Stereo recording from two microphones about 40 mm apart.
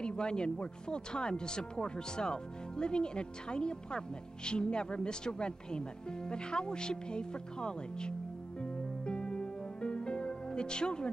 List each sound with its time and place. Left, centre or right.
0.0 s speech: left
8.5 s music: left